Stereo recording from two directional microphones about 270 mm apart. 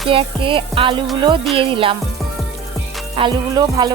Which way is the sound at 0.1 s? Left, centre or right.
Centre.